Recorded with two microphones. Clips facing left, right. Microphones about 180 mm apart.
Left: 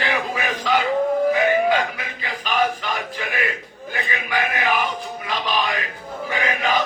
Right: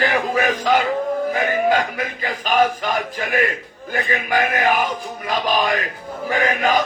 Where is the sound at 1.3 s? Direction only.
45° right (ahead or behind).